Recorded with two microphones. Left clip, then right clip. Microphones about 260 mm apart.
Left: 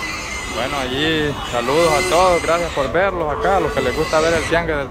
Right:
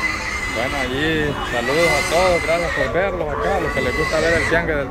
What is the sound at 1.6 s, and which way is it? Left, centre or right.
Speech, left.